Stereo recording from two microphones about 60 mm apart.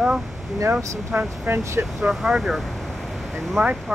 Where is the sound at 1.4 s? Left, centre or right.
Right.